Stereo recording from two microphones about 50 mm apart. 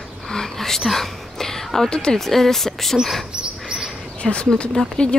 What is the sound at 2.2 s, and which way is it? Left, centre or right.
Speech, centre.